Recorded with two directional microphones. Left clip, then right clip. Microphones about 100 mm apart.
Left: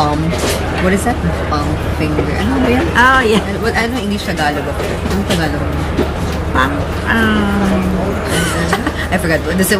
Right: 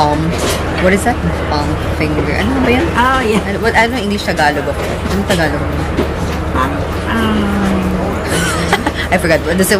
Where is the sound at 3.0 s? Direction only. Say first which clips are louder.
Left 2 dB; 15° left (ahead or behind).